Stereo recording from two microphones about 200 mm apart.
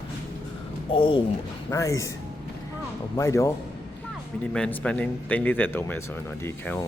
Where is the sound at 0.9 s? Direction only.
25° left (ahead or behind).